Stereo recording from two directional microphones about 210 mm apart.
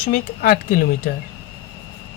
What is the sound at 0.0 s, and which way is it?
Speech, 40° left (ahead or behind).